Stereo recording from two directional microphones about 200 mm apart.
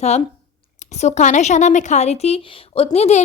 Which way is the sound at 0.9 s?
35° left (ahead or behind).